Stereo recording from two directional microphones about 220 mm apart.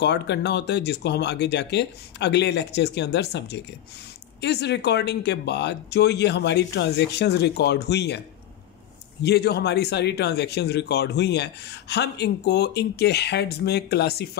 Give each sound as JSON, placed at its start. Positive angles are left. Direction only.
{"t": 0.0, "sound": "a man's voice", "side_deg": 50}
{"t": 9.2, "sound": "a man's voice", "side_deg": 50}